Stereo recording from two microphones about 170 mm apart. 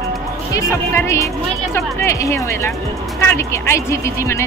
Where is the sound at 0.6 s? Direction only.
15° left (ahead or behind).